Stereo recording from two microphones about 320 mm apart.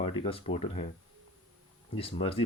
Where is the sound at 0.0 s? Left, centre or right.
Centre.